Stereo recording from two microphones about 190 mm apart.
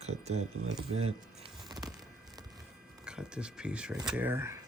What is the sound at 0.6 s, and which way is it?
Speech, 90° right.